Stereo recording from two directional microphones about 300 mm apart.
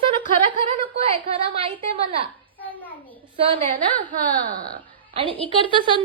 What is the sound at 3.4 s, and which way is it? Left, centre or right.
Speech, centre.